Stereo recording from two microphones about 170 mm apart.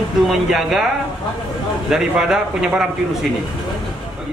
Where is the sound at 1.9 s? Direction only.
5° right (ahead or behind).